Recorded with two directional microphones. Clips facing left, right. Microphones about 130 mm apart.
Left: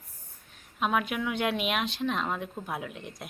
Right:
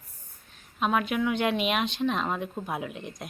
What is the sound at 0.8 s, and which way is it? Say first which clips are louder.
Speech: right 2 dB; 5° left (ahead or behind).